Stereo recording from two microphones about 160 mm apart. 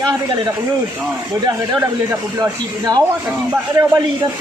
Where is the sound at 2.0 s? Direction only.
20° right (ahead or behind).